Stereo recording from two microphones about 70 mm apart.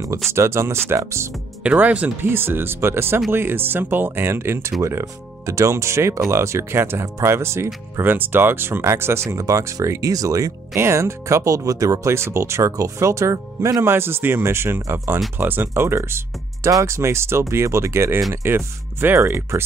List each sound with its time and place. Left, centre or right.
0.3 s speech: right
1.6 s speech: right
2.2 s speech: right
8.0 s speech: right
9.4 s speech: right
10.8 s speech: right
12.1 s speech: right